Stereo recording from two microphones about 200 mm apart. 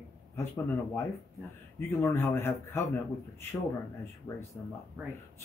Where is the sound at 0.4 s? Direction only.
15° left (ahead or behind).